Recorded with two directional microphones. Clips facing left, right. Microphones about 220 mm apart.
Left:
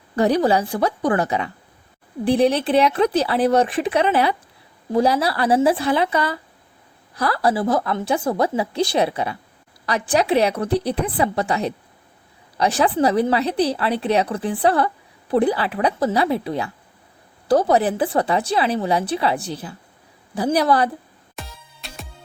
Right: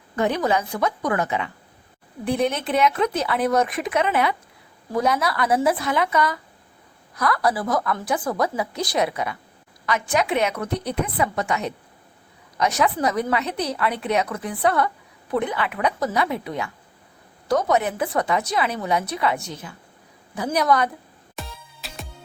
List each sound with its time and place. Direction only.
0.2 s speech: 35° left (ahead or behind)
21.3 s music: centre (ahead or behind)